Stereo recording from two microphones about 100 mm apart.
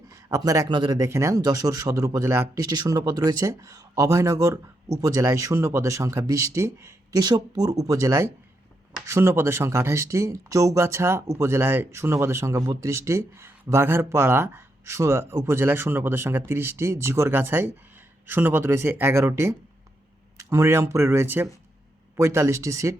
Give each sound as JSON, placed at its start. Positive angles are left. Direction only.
{"t": 0.1, "sound": "a sound", "side_deg": -35}
{"t": 0.7, "sound": "speech", "side_deg": -50}
{"t": 0.9, "sound": "speech", "side_deg": -30}
{"t": 2.6, "sound": "speech", "side_deg": -40}
{"t": 7.2, "sound": "speech", "side_deg": -45}